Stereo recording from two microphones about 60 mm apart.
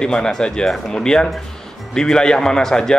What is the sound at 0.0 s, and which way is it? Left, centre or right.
A man's voice, centre.